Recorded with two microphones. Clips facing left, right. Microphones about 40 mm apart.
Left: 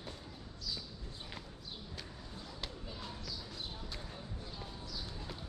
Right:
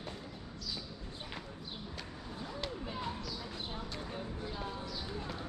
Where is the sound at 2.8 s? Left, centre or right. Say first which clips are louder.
Right 6 dB; right.